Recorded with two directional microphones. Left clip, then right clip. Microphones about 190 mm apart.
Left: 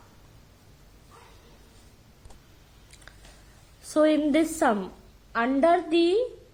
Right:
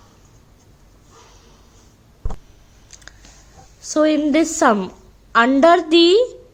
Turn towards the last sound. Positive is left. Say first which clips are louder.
# right 10 dB
turn(degrees=-35)  # may be behind; listen again after turning